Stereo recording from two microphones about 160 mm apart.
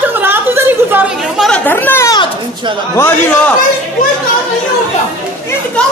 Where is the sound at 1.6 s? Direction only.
10° left (ahead or behind).